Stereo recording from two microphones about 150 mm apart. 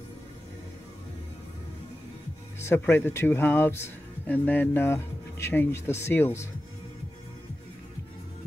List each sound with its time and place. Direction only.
2.6 s speech: 15° left (ahead or behind)